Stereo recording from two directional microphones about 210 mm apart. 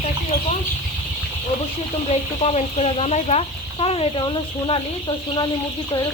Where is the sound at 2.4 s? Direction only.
30° left (ahead or behind).